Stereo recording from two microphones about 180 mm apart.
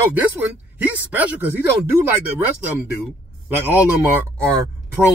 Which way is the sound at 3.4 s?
10° right (ahead or behind).